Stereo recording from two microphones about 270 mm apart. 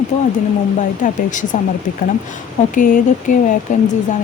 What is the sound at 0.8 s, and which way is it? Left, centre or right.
Speech, left.